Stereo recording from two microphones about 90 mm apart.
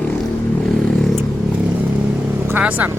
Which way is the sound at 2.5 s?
20° right (ahead or behind).